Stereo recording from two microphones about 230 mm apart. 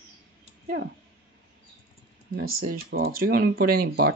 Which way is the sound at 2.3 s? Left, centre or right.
Right.